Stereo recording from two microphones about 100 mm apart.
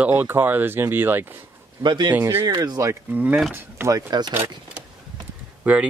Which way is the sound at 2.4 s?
40° right (ahead or behind).